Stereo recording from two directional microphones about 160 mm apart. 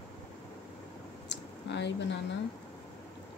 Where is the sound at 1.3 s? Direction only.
90° left.